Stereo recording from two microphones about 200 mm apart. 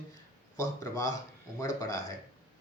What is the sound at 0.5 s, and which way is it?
Speech, 15° left (ahead or behind).